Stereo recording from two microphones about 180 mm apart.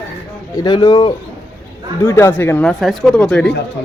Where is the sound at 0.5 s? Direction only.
25° left (ahead or behind); by 3.5 s 5° left (ahead or behind).